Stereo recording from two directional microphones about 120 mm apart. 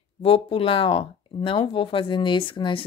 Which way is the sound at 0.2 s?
55° left (ahead or behind).